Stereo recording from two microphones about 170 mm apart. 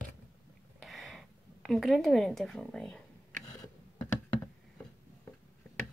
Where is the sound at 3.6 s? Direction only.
20° left (ahead or behind).